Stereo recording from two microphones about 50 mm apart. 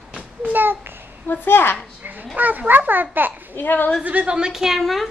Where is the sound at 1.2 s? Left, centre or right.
Left.